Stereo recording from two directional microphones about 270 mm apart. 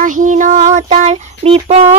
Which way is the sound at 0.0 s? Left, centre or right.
Right.